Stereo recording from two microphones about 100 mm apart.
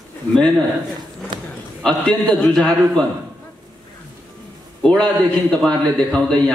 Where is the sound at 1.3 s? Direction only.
50° right (ahead or behind).